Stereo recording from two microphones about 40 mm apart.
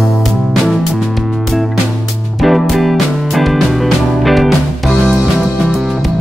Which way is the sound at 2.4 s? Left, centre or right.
Centre.